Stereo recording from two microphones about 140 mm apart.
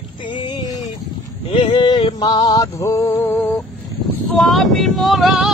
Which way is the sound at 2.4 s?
25° left (ahead or behind).